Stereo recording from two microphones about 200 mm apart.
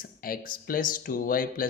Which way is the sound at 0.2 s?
45° left (ahead or behind).